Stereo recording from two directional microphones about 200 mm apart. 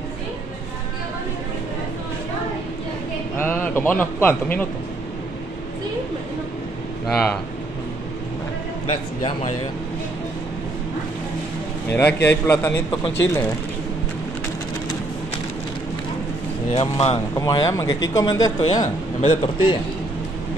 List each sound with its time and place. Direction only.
3.3 s a man's voice: 10° left (ahead or behind)
7.1 s speech: centre (ahead or behind)
8.8 s a man's voice: 30° left (ahead or behind)
11.9 s a man's voice: 10° left (ahead or behind)
16.7 s a man's voice: 30° left (ahead or behind)
17.4 s a man's voice: 20° left (ahead or behind)